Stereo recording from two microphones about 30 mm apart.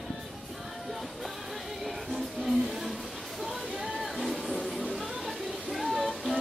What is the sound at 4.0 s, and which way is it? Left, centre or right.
Music, centre.